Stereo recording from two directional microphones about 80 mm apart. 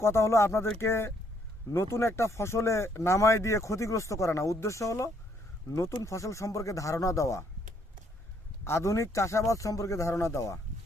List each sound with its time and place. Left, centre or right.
0.0 s speech: left
8.6 s speech: left